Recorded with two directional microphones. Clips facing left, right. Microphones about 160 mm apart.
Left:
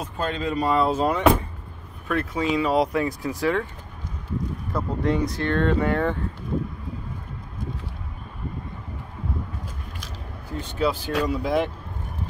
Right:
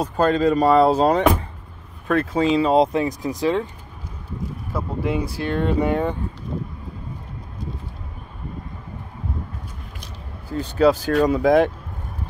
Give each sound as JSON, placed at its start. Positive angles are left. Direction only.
{"t": 0.0, "sound": "speech", "side_deg": -40}
{"t": 4.7, "sound": "speech", "side_deg": -5}
{"t": 10.6, "sound": "speech", "side_deg": -40}
{"t": 11.2, "sound": "speech", "side_deg": -90}